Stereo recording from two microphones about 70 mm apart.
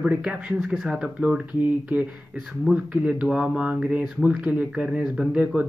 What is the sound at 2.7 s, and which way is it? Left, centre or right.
Speech, centre.